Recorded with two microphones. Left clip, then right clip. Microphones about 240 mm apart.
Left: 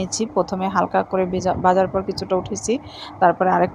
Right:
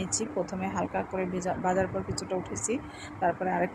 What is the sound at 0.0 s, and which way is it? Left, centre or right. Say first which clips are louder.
Speech: left 10 dB; left.